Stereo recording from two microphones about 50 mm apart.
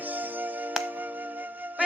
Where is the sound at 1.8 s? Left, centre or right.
Right.